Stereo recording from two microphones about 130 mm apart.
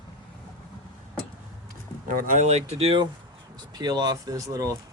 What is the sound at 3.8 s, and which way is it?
Speech, 30° right (ahead or behind).